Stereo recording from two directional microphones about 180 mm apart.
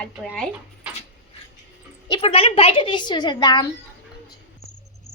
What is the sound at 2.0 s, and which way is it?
A woman's voice, 30° left (ahead or behind).